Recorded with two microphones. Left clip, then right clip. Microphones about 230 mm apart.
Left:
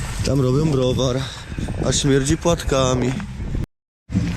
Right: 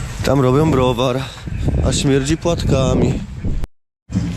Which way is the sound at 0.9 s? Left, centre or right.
Centre.